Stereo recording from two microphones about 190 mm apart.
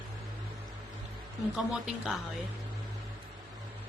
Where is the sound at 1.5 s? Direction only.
Centre (ahead or behind).